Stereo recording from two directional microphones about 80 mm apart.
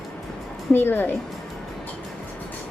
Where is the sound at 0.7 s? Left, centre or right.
Left.